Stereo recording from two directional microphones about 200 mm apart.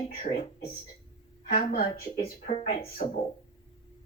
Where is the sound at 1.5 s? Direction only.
40° left (ahead or behind).